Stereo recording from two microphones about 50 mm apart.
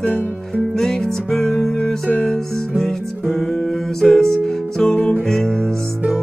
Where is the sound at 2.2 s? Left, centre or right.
Centre.